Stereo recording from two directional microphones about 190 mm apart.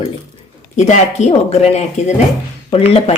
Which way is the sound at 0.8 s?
40° left (ahead or behind).